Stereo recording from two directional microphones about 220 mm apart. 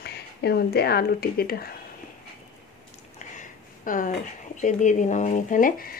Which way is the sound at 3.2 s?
35° left (ahead or behind).